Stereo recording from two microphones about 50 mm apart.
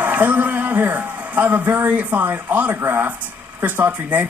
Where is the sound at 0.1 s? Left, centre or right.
Right.